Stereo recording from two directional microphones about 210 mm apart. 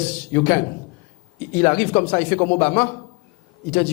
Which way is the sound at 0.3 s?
15° left (ahead or behind).